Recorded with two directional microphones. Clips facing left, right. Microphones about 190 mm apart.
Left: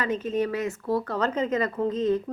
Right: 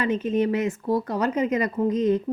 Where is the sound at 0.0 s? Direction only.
20° right (ahead or behind).